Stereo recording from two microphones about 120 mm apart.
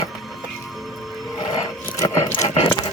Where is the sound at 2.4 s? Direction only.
70° left (ahead or behind).